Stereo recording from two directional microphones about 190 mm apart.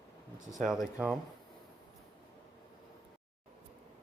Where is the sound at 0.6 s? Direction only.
Centre (ahead or behind).